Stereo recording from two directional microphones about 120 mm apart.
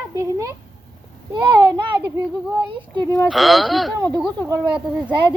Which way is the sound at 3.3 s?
Centre (ahead or behind).